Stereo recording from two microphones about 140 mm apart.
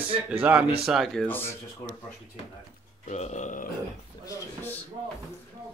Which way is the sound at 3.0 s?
55° left (ahead or behind).